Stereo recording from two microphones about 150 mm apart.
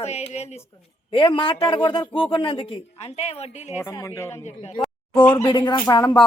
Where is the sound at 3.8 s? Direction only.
20° left (ahead or behind).